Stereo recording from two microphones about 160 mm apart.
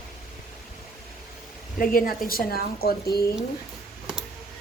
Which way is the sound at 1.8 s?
60° left (ahead or behind).